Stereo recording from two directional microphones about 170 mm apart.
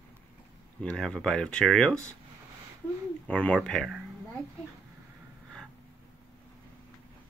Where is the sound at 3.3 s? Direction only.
10° left (ahead or behind).